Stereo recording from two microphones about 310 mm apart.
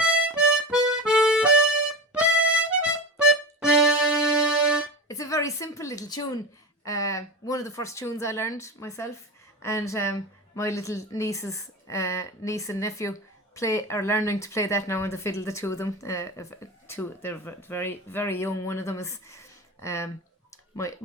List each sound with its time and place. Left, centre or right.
0.0 s music: centre
5.0 s a woman's voice: centre